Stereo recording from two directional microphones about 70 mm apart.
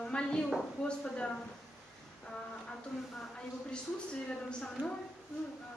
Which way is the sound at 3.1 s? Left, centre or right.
Centre.